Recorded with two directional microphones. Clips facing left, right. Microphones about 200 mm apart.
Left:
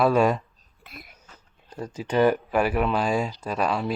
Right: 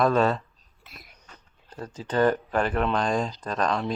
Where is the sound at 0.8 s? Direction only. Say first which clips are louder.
Left 5 dB; 55° left (ahead or behind).